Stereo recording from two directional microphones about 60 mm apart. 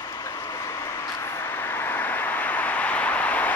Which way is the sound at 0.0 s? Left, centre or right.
Left.